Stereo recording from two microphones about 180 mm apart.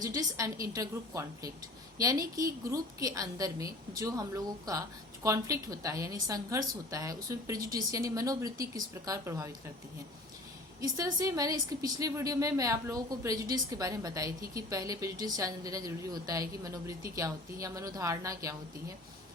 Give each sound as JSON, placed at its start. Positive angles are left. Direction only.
{"t": 0.0, "sound": "a woman's voice", "side_deg": -20}
{"t": 10.8, "sound": "a woman's voice", "side_deg": -20}